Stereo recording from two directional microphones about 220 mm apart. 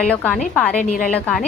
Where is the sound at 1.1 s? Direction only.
5° left (ahead or behind).